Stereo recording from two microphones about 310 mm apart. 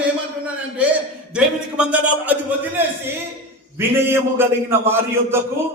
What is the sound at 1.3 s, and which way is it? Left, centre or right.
A man's voice, centre.